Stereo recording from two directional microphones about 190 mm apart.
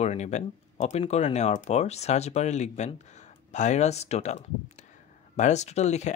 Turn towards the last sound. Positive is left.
turn(degrees=35)  # may be behind; listen again after turning